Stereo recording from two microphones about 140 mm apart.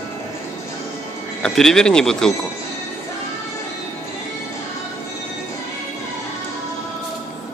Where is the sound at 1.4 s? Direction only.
5° left (ahead or behind).